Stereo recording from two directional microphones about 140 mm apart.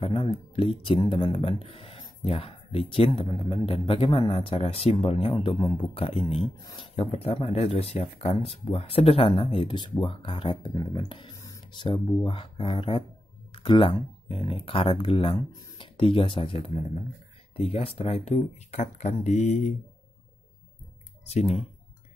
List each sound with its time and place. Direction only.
0.0 s speech: 40° left (ahead or behind)
6.6 s speech: 25° left (ahead or behind)
7.0 s speech: 45° left (ahead or behind)
11.3 s speech: 25° left (ahead or behind); by 19.7 s 55° left (ahead or behind)
21.3 s speech: 50° left (ahead or behind)